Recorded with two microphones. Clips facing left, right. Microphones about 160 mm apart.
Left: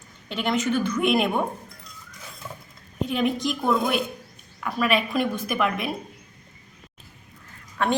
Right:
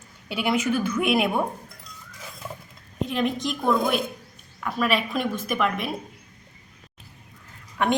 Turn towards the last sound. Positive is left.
turn(degrees=-15)  # may be behind; listen again after turning